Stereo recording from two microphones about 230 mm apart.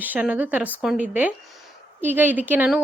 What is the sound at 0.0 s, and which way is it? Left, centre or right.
A woman's voice, centre.